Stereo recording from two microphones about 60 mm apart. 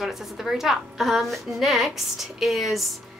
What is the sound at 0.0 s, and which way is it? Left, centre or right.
Speech, centre.